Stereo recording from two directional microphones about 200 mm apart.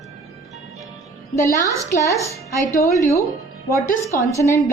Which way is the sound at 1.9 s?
15° left (ahead or behind).